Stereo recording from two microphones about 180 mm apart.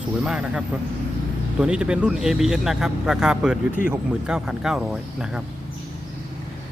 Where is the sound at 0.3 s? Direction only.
5° right (ahead or behind).